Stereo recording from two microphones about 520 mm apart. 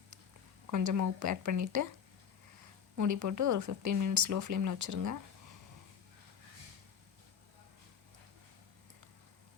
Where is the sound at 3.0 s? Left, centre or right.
Right.